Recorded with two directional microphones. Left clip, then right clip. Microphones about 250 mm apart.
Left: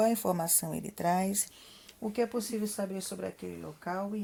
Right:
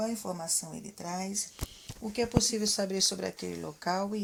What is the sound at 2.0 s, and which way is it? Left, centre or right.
Speech, centre.